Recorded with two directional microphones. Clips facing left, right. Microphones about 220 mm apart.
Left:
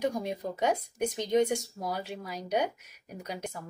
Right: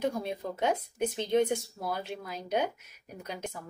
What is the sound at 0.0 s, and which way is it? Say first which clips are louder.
Speech: left 1 dB; 15° left (ahead or behind).